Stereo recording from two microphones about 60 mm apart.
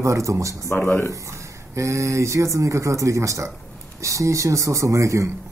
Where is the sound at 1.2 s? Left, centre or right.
Right.